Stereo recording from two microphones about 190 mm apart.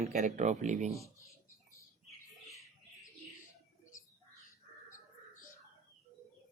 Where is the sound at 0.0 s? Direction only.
35° right (ahead or behind).